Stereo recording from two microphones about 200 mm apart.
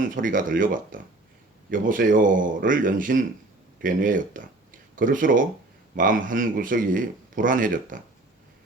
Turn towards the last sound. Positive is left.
turn(degrees=-40)  # may be behind; listen again after turning